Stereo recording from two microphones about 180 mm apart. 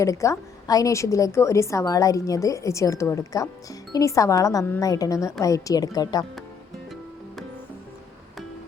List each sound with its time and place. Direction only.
0.0 s a woman's voice: 15° left (ahead or behind)